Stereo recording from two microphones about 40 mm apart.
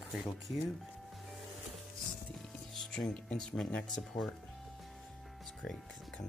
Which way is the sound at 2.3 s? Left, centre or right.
Centre.